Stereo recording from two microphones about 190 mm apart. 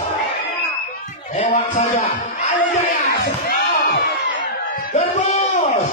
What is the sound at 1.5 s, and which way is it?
Speech, 40° left (ahead or behind).